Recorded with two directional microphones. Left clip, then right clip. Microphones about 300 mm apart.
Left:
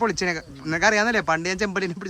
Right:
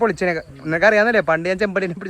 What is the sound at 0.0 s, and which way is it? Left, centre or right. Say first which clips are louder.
Speech: right 5 dB; centre.